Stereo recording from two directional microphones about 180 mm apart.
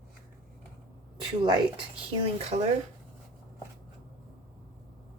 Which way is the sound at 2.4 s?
40° right (ahead or behind).